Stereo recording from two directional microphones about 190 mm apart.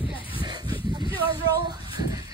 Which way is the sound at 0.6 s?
25° left (ahead or behind).